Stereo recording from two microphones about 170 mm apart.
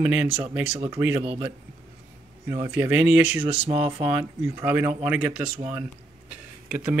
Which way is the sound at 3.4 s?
35° right (ahead or behind).